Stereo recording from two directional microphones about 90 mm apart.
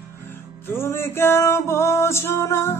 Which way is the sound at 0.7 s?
30° left (ahead or behind).